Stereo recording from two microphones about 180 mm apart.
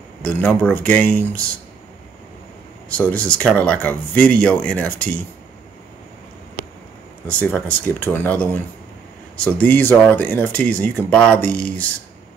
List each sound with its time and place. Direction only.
0.2 s speech: 5° left (ahead or behind)
2.9 s speech: 10° left (ahead or behind)
7.2 s speech: 10° left (ahead or behind)